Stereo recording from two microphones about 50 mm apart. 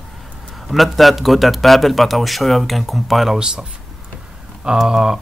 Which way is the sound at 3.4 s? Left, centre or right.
Centre.